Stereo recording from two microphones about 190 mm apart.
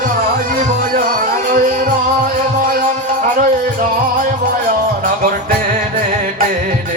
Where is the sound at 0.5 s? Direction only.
45° right (ahead or behind).